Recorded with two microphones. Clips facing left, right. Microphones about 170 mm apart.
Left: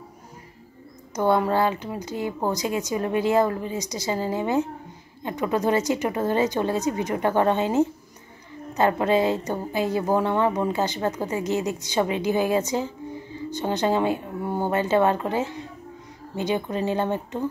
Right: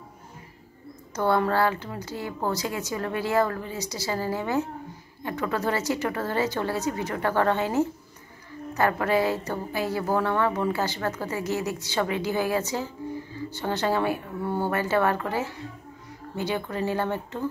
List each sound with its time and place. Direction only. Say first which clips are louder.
1.1 s a woman's voice: left 2 dB; 15° left (ahead or behind)